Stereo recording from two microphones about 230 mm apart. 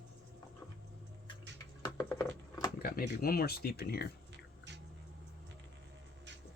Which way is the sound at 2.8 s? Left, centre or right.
Left.